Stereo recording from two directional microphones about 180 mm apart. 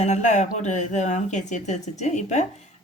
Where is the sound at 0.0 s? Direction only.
40° left (ahead or behind).